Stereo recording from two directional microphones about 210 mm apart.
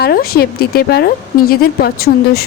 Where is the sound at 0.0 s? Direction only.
45° left (ahead or behind).